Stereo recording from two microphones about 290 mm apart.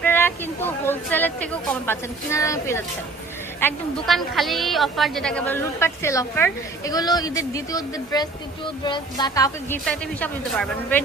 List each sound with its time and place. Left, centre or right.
0.0 s a woman's voice: centre